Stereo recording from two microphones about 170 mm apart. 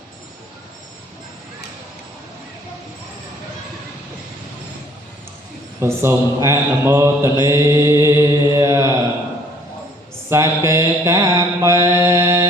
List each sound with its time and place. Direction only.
5.8 s mantra: 15° right (ahead or behind)
10.2 s mantra: 15° right (ahead or behind)
12.0 s music: 15° right (ahead or behind)